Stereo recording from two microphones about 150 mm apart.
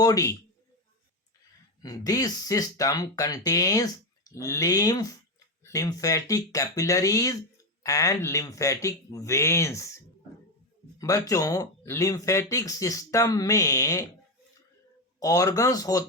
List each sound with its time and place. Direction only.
0.0 s speech: 25° left (ahead or behind)
1.8 s speech: 25° left (ahead or behind)
11.0 s speech: 20° left (ahead or behind)
15.2 s speech: 25° left (ahead or behind)